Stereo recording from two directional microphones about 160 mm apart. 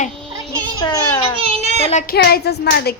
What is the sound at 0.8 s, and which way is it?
Speech, 20° left (ahead or behind).